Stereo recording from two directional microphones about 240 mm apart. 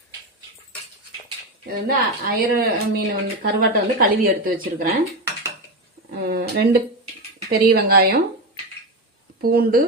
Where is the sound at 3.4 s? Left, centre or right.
Right.